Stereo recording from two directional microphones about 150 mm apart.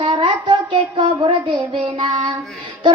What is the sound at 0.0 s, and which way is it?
Child singing, 30° right (ahead or behind).